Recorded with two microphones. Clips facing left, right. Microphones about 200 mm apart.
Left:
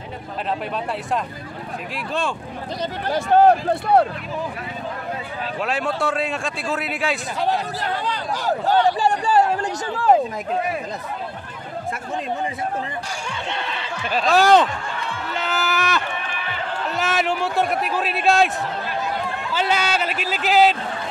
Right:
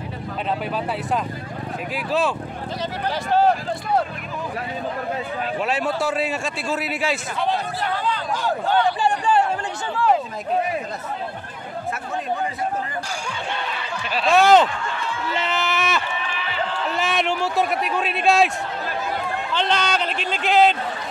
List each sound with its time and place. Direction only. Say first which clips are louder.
3.1 s speech: left 4 dB; 50° left (ahead or behind)
5.6 s a man's voice: left 1 dB; centre (ahead or behind)
7.3 s speech: left 1 dB; 40° left (ahead or behind)
14.2 s a man's voice: right 1 dB; centre (ahead or behind)
16.2 s run: right 1 dB; 50° left (ahead or behind)
16.9 s a man's voice: left 2 dB; centre (ahead or behind)
19.5 s a man's voice: left 1 dB; 5° left (ahead or behind)